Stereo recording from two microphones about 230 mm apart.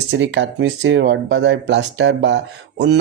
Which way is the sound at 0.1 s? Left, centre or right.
Right.